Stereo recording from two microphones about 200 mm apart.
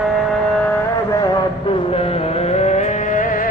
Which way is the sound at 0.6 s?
10° left (ahead or behind).